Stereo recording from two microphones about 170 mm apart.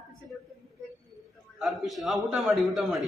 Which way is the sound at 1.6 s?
Centre (ahead or behind).